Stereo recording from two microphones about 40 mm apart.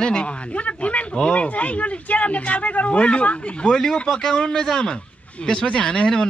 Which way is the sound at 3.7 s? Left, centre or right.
Centre.